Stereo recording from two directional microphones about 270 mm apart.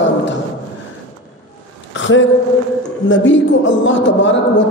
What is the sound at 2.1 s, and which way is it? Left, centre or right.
A woman's voice, left.